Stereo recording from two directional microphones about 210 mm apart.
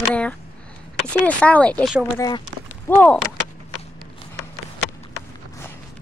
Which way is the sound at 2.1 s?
20° left (ahead or behind).